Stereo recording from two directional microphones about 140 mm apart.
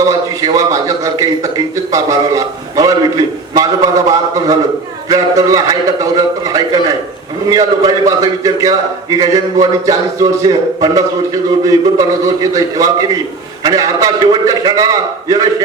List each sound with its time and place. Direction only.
0.0 s a man's voice: 25° right (ahead or behind)